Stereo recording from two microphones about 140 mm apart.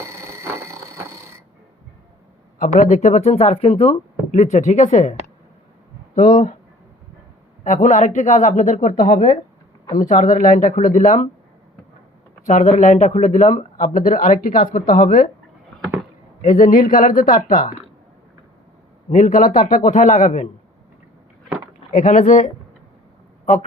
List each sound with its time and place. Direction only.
0.0 s a sound: 20° right (ahead or behind)
2.6 s speech: 70° left (ahead or behind)
6.1 s speech: 70° left (ahead or behind)
7.6 s speech: 60° left (ahead or behind)
12.5 s speech: 60° left (ahead or behind)
13.8 s speech: 75° left (ahead or behind)
16.4 s speech: 75° left (ahead or behind)
19.1 s speech: 70° left (ahead or behind)
21.9 s speech: 65° left (ahead or behind)